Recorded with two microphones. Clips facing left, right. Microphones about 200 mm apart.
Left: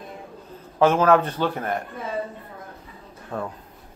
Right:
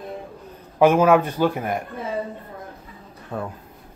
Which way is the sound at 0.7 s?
10° right (ahead or behind).